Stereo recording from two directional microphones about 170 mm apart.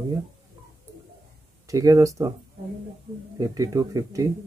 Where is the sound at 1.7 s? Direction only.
20° right (ahead or behind).